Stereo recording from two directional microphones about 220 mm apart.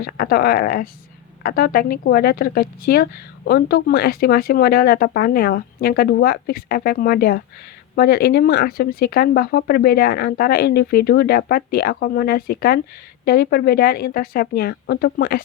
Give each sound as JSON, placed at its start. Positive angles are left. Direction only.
{"t": 0.0, "sound": "speech", "side_deg": 40}